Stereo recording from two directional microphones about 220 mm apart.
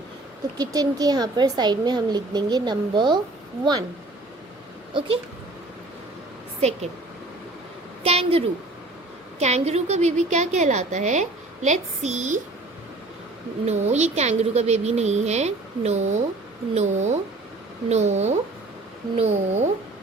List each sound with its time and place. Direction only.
0.6 s speech: 15° right (ahead or behind)
4.9 s speech: 25° right (ahead or behind)
8.0 s a woman's voice: 25° right (ahead or behind)
13.7 s a woman's voice: 30° right (ahead or behind)